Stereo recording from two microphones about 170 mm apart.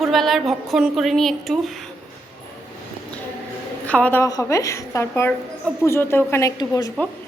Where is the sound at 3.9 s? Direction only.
10° left (ahead or behind).